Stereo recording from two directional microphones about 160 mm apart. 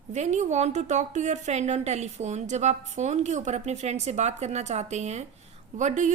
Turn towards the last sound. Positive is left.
turn(degrees=-50)  # may be behind; listen again after turning